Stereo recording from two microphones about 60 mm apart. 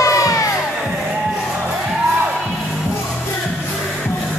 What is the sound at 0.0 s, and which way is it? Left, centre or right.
Music, left.